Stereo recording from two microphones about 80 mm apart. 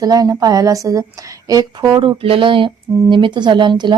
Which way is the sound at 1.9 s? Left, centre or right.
Right.